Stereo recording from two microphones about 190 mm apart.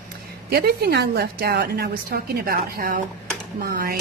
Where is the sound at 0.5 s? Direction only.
55° right (ahead or behind).